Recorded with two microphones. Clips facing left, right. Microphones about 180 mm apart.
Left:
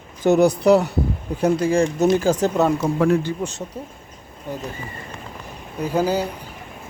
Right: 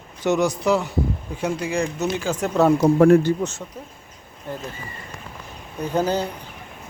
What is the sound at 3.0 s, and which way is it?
Speech, 50° right (ahead or behind).